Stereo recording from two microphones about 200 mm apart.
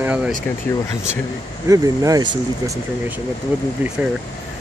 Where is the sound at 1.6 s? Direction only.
15° right (ahead or behind).